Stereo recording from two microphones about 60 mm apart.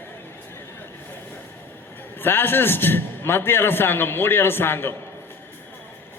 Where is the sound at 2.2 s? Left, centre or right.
Left.